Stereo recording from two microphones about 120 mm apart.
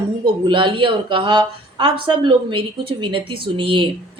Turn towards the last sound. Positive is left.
turn(degrees=-45)  # may be behind; listen again after turning